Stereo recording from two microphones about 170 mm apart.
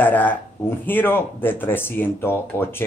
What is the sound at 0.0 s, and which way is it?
Speech, 10° left (ahead or behind).